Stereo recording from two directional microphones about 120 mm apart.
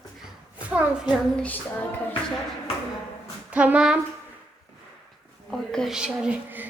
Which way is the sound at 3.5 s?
10° right (ahead or behind).